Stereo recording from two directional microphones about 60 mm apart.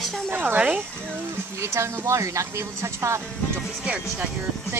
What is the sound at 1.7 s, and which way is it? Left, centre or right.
Speech, right.